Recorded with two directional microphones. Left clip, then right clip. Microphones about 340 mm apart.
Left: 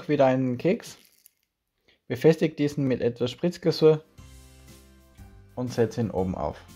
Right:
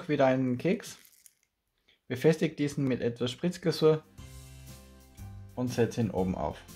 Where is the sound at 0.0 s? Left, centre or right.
Centre.